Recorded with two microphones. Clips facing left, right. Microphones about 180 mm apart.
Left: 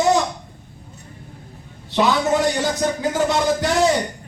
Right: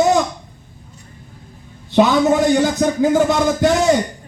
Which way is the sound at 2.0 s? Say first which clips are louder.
Right 5 dB; 55° right (ahead or behind).